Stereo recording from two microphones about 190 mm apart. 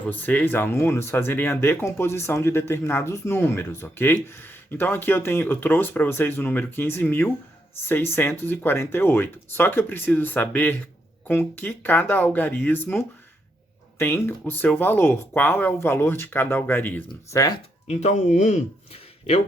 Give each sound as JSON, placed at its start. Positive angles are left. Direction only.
{"t": 0.1, "sound": "speech", "side_deg": 10}
{"t": 17.8, "sound": "speech", "side_deg": 35}